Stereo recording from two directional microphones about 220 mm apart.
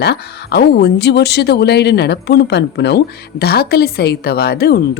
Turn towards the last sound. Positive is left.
turn(degrees=45)  # may be behind; listen again after turning